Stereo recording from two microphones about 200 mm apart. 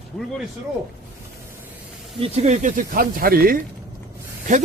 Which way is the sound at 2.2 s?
35° right (ahead or behind).